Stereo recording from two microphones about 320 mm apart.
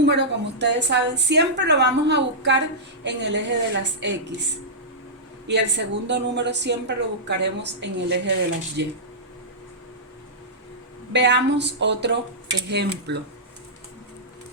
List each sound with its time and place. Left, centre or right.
0.0 s a woman's voice: right
5.5 s a woman's voice: right
11.1 s a woman's voice: right